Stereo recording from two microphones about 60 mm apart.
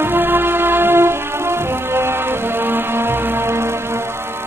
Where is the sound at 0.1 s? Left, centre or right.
Right.